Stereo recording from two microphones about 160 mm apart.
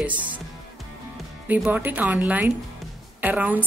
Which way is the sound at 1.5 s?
10° right (ahead or behind).